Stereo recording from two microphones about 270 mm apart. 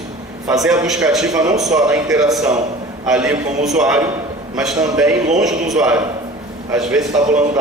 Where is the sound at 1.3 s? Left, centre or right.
Centre.